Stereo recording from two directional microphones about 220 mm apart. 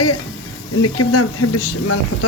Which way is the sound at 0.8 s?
90° left.